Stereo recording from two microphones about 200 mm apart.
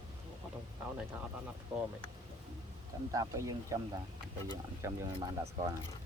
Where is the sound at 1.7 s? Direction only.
5° right (ahead or behind).